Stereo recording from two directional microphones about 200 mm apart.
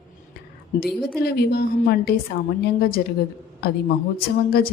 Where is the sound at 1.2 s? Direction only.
55° left (ahead or behind).